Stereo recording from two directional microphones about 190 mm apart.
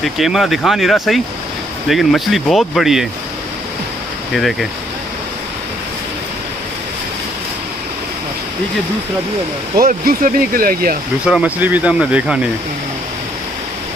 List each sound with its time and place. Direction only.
0.0 s speech: centre (ahead or behind)
4.3 s speech: centre (ahead or behind)
9.8 s speech: 45° right (ahead or behind)
11.2 s speech: 5° right (ahead or behind)